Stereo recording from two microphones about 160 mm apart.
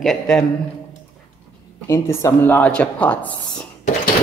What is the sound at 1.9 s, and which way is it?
A woman's voice, 20° left (ahead or behind).